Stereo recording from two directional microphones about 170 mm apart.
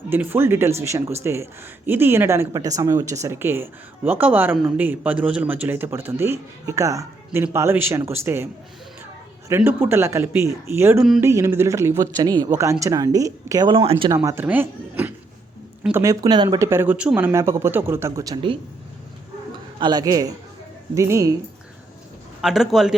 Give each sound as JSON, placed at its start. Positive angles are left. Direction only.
{"t": 0.1, "sound": "speech", "side_deg": -10}
{"t": 9.5, "sound": "speech", "side_deg": -15}
{"t": 14.3, "sound": "speech", "side_deg": -10}
{"t": 19.8, "sound": "speech", "side_deg": -25}
{"t": 22.4, "sound": "a man's voice", "side_deg": 0}